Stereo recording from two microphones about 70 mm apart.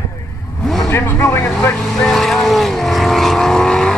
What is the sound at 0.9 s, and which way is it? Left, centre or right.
Speech, left.